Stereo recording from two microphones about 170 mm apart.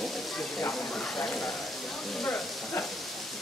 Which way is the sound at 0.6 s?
10° left (ahead or behind).